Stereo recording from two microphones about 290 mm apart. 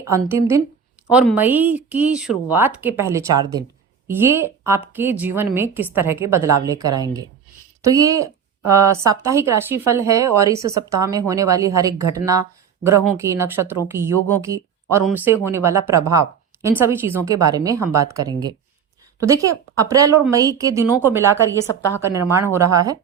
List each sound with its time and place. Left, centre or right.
0.1 s speech: centre
21.8 s a woman's voice: centre
22.0 s speech: centre